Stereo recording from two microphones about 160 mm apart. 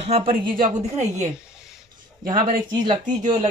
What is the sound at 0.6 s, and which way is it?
Speech, 45° right (ahead or behind).